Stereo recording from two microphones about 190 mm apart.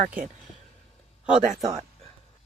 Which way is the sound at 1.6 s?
20° right (ahead or behind).